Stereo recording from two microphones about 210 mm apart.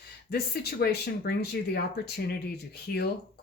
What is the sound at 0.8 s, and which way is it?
Speech, 50° left (ahead or behind).